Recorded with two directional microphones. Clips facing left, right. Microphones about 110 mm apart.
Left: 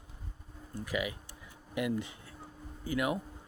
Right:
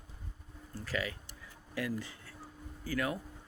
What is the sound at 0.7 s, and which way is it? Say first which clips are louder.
A man's voice: left 2 dB; 15° left (ahead or behind).